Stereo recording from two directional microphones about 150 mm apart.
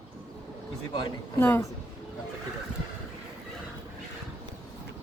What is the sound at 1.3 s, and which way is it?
Speech, 15° left (ahead or behind).